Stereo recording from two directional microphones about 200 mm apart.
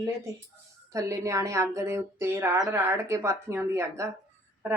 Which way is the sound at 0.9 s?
15° right (ahead or behind).